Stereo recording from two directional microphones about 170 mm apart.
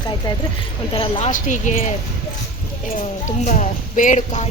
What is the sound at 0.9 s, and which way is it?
Speech, 30° left (ahead or behind).